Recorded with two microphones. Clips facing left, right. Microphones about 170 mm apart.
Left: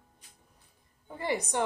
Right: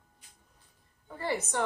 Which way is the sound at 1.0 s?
15° left (ahead or behind).